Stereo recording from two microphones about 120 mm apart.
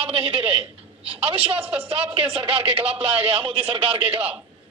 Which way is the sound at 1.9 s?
50° right (ahead or behind).